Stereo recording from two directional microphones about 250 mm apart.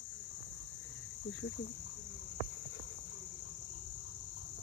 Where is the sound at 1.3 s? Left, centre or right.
Left.